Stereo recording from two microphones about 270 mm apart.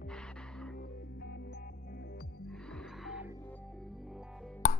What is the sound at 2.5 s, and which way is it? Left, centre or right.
Music, centre.